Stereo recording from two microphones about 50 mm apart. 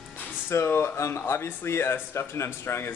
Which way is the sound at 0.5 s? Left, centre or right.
Left.